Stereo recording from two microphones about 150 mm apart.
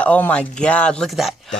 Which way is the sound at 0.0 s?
10° left (ahead or behind).